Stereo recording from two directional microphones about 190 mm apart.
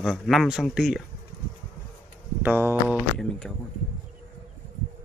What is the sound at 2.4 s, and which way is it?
Speech, 10° right (ahead or behind).